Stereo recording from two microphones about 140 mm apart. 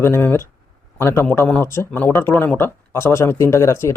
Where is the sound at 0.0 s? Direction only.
15° left (ahead or behind).